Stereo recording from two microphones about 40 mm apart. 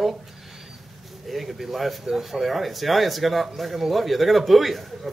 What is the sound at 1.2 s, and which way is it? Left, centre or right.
Speech, centre.